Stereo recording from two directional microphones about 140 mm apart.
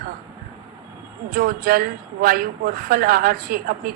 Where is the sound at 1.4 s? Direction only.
90° right.